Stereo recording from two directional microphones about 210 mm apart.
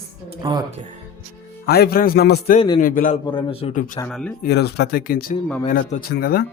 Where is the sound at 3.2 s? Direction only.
25° left (ahead or behind).